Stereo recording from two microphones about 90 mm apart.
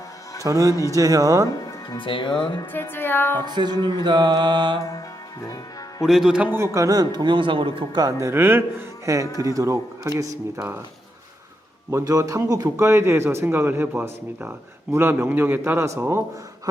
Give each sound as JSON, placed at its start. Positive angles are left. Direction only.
{"t": 0.4, "sound": "a man's voice", "side_deg": -40}
{"t": 2.0, "sound": "speech", "side_deg": 65}
{"t": 2.7, "sound": "music", "side_deg": 25}
{"t": 3.4, "sound": "music", "side_deg": -55}
{"t": 6.0, "sound": "a man's voice", "side_deg": -5}
{"t": 6.6, "sound": "a man's voice", "side_deg": -35}
{"t": 8.2, "sound": "a man's voice", "side_deg": -25}
{"t": 11.9, "sound": "a man's voice", "side_deg": -35}